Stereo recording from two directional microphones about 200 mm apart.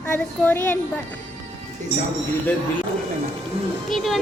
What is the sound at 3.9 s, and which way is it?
Speech, centre (ahead or behind).